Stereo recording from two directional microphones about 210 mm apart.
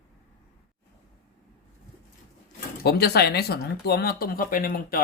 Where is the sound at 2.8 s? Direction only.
50° left (ahead or behind).